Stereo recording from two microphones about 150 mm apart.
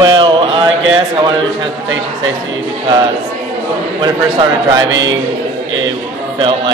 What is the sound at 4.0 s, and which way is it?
Speech, 30° right (ahead or behind).